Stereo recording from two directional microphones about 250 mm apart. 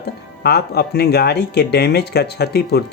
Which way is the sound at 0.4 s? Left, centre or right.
Left.